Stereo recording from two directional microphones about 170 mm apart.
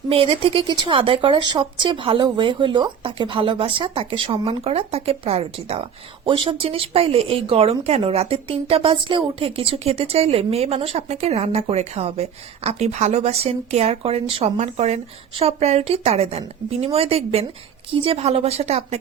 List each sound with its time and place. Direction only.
0.1 s a woman's voice: 35° right (ahead or behind)